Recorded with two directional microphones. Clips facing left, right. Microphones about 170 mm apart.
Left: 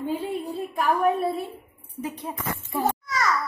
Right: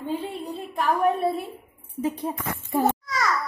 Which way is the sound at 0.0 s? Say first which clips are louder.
Left 2 dB; 10° left (ahead or behind).